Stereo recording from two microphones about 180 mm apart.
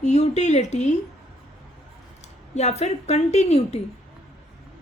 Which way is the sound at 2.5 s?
40° left (ahead or behind).